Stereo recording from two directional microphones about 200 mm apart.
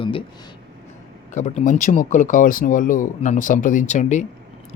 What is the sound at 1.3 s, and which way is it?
Speech, 40° left (ahead or behind).